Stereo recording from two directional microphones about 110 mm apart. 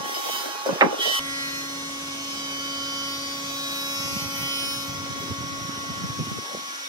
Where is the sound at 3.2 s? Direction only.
35° right (ahead or behind).